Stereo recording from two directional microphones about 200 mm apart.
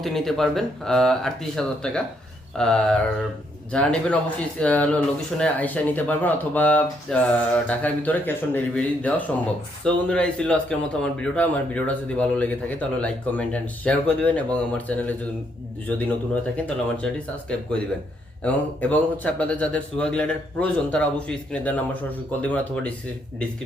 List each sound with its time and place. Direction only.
0.0 s a man's voice: centre (ahead or behind)
18.4 s a man's voice: 5° left (ahead or behind)